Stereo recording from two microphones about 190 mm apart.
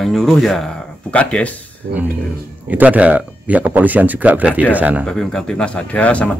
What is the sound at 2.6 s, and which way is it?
Speech, 10° right (ahead or behind).